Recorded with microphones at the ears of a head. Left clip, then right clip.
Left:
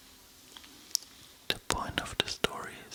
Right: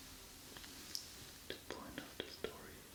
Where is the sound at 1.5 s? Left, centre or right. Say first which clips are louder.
Left 17 dB; left.